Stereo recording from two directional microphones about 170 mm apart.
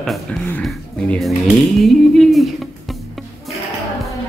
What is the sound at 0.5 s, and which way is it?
Speech, 5° left (ahead or behind).